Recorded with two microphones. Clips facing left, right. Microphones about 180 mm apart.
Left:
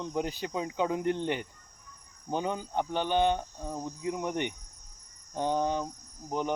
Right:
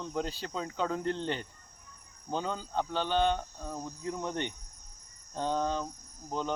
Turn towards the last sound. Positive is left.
turn(degrees=15)  # may be behind; listen again after turning